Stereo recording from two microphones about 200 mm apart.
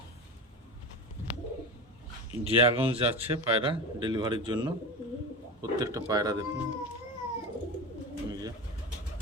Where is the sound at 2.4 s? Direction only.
30° right (ahead or behind).